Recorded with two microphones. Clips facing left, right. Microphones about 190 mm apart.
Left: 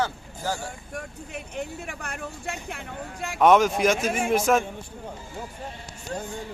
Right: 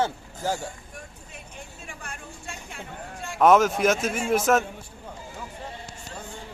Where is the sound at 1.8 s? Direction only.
65° left (ahead or behind).